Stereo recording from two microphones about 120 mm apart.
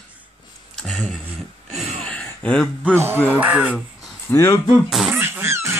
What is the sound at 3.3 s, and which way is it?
Speech, 10° right (ahead or behind).